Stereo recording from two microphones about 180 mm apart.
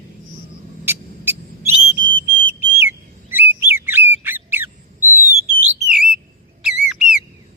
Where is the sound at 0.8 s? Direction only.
10° right (ahead or behind).